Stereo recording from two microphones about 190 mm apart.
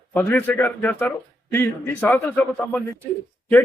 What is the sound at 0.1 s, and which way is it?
Speech, 10° left (ahead or behind).